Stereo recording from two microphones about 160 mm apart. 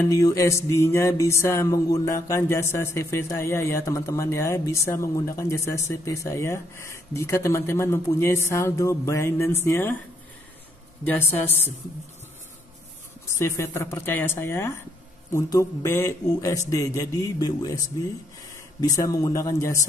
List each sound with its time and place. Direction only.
0.1 s mantra: 20° left (ahead or behind)
11.1 s mantra: 10° left (ahead or behind)
13.3 s mantra: 20° left (ahead or behind)
15.3 s a man's voice: 15° left (ahead or behind)